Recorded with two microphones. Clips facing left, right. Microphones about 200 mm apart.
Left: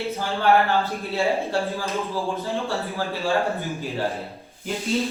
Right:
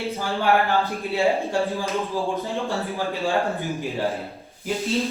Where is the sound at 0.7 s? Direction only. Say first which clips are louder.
Right 1 dB; 15° right (ahead or behind).